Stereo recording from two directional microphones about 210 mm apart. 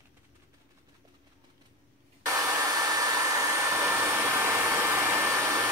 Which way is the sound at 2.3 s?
15° right (ahead or behind).